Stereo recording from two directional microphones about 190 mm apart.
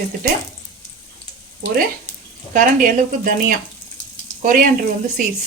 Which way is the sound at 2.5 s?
45° right (ahead or behind).